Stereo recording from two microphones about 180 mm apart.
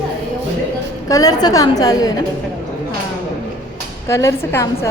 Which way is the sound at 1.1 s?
20° left (ahead or behind).